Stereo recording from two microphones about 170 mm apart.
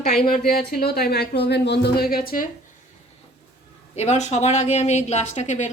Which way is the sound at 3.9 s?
45° left (ahead or behind).